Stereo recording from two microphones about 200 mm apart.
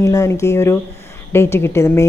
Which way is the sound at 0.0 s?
15° left (ahead or behind).